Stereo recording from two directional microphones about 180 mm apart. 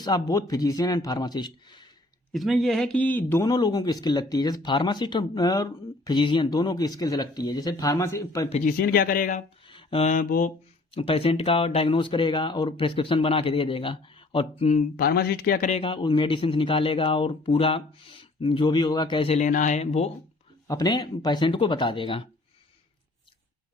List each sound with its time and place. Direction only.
0.0 s speech: 20° left (ahead or behind)
2.3 s speech: centre (ahead or behind); by 8.4 s 15° left (ahead or behind)
8.4 s speech: 40° left (ahead or behind)
8.8 s speech: 60° left (ahead or behind)
9.6 s a sound: 30° left (ahead or behind)
10.1 s speech: 50° left (ahead or behind)
10.9 s speech: 30° left (ahead or behind); by 15.7 s 55° left (ahead or behind)
15.7 s speech: 30° left (ahead or behind)
20.7 s speech: 20° left (ahead or behind)